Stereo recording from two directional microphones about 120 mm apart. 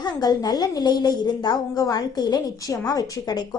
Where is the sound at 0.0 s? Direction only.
35° left (ahead or behind).